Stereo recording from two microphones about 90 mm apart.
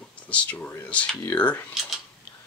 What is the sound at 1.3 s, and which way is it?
Cutlery, 20° left (ahead or behind).